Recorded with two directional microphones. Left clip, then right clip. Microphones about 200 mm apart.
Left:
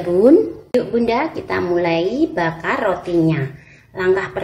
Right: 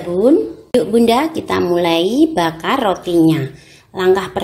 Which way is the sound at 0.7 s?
40° right (ahead or behind).